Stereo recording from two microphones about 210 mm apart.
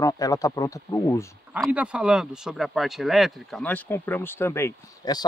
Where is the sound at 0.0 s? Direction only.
15° left (ahead or behind).